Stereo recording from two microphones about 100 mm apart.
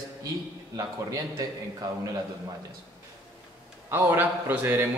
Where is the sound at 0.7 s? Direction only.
35° right (ahead or behind).